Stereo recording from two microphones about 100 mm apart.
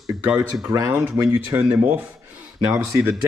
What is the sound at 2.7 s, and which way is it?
Speech, 25° right (ahead or behind).